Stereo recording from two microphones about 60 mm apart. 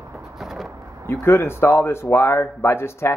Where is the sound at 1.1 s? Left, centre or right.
Left.